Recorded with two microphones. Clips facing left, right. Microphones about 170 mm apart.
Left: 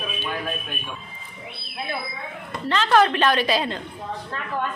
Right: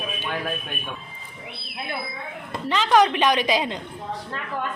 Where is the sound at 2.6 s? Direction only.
10° right (ahead or behind).